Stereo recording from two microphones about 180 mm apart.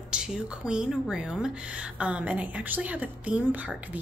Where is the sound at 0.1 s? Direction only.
5° right (ahead or behind).